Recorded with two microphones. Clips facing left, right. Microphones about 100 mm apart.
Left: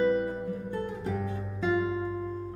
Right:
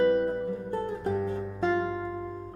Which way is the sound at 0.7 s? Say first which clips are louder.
Right 3 dB; 40° right (ahead or behind).